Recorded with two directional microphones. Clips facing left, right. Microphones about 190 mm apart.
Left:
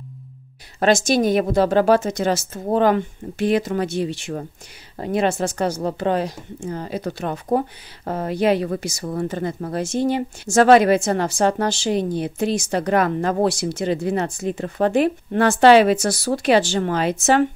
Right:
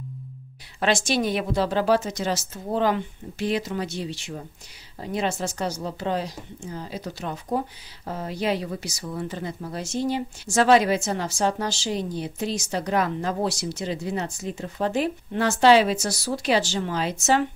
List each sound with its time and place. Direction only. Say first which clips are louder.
0.7 s speech: left 6 dB; 45° left (ahead or behind); by 17.5 s 60° left (ahead or behind)